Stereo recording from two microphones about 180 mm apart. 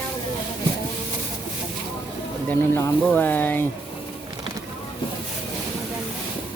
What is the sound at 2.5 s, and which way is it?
Speech, 10° left (ahead or behind).